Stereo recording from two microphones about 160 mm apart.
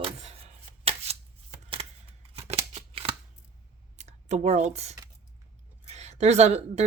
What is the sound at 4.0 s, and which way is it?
A woman's voice, 45° right (ahead or behind).